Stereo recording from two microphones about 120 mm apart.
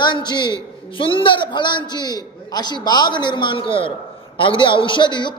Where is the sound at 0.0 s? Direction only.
40° left (ahead or behind).